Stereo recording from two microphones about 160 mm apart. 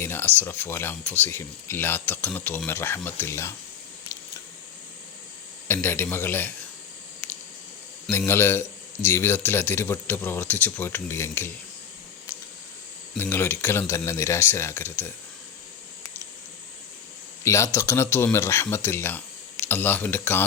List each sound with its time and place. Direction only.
0.0 s a sound: 15° left (ahead or behind)
0.3 s a man's voice: 10° left (ahead or behind)
5.6 s a man's voice: 15° left (ahead or behind)
8.3 s a man's voice: 15° left (ahead or behind)
13.1 s a man's voice: 10° left (ahead or behind)
17.4 s a man's voice: 20° left (ahead or behind)